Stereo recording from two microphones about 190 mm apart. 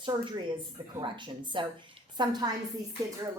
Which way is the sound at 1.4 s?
25° right (ahead or behind).